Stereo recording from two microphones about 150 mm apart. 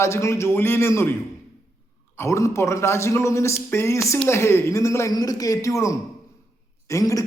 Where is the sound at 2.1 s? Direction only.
20° left (ahead or behind).